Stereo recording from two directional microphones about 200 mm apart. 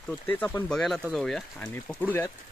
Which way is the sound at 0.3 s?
10° left (ahead or behind).